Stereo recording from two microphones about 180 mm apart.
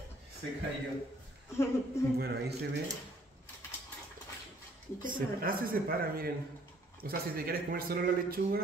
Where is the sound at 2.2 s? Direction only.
60° right (ahead or behind).